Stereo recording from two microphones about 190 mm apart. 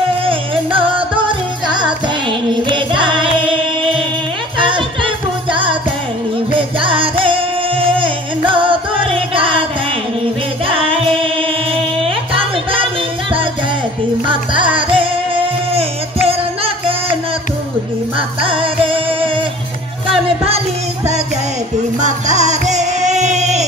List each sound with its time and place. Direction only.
0.2 s music: 25° right (ahead or behind)
10.7 s singing: 30° right (ahead or behind)
12.0 s music: 30° right (ahead or behind)
14.2 s music: 25° right (ahead or behind)
18.1 s music: 30° right (ahead or behind)
22.0 s music: 40° right (ahead or behind)